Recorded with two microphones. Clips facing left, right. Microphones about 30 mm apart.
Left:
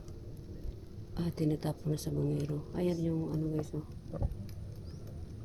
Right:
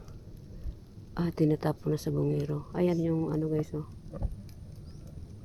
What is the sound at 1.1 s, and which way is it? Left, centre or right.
Speech, right.